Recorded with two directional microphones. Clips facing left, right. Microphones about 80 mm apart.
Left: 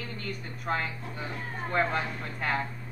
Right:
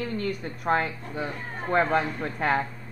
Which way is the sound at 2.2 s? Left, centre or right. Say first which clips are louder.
Right 6 dB; right.